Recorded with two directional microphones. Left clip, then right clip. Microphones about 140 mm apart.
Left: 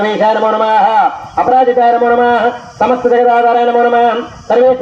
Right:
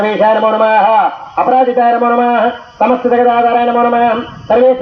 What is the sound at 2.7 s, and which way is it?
A man's voice, 15° right (ahead or behind).